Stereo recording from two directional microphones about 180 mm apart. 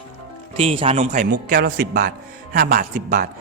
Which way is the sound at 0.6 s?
35° right (ahead or behind).